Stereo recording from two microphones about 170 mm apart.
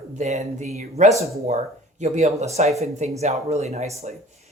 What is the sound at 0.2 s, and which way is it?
Speech, 40° right (ahead or behind).